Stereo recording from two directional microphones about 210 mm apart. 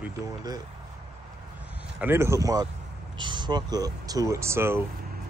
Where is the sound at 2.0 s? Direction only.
10° right (ahead or behind).